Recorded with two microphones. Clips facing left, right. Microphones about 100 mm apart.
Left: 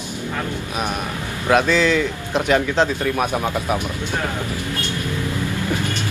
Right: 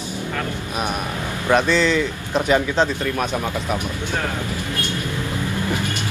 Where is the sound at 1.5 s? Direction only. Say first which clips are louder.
Left 1 dB; 5° left (ahead or behind).